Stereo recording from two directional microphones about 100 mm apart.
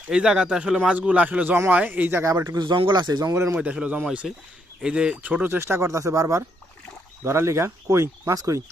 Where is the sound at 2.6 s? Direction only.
55° right (ahead or behind).